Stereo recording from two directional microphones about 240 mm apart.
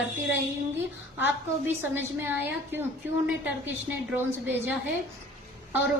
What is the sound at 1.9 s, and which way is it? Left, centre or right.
Speech, centre.